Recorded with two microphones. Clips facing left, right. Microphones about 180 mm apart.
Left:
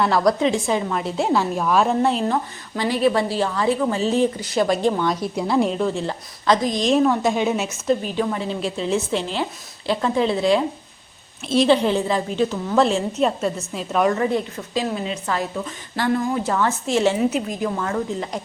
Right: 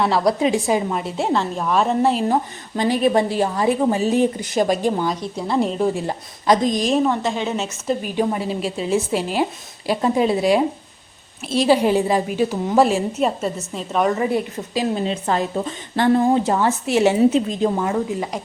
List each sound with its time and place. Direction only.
0.0 s a woman's voice: 5° right (ahead or behind)
2.8 s a woman's voice: 20° right (ahead or behind)
5.4 s a woman's voice: 5° left (ahead or behind)
5.8 s a woman's voice: 10° right (ahead or behind)
6.8 s a woman's voice: 5° right (ahead or behind)
7.1 s a woman's voice: 10° left (ahead or behind)
7.9 s a woman's voice: 15° right (ahead or behind)
8.4 s a woman's voice: 5° right (ahead or behind)
15.0 s a woman's voice: 30° right (ahead or behind)
16.5 s a woman's voice: 15° right (ahead or behind)
17.2 s speech: 25° right (ahead or behind); by 18.3 s 10° right (ahead or behind)